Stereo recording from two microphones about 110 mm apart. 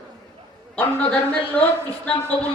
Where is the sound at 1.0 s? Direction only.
10° left (ahead or behind).